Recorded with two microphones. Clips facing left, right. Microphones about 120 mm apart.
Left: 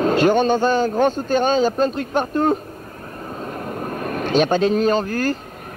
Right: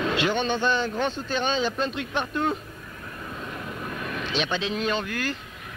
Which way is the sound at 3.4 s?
45° left (ahead or behind).